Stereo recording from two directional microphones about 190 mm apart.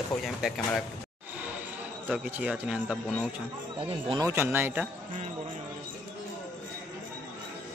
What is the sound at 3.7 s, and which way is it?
Speech, 25° right (ahead or behind).